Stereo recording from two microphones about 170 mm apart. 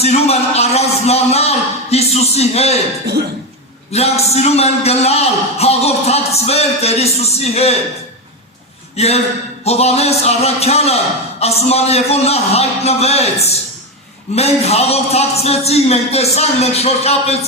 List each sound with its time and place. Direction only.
0.0 s a man's voice: 40° left (ahead or behind)
3.9 s a man's voice: 40° left (ahead or behind)
9.0 s a man's voice: 40° left (ahead or behind)